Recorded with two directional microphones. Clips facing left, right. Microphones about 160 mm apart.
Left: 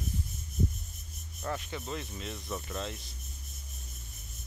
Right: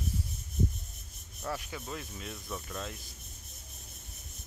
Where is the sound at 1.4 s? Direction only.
Centre (ahead or behind).